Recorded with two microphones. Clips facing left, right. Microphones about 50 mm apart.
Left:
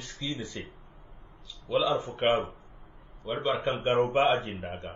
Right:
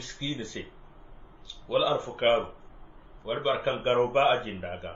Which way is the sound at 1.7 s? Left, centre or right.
Right.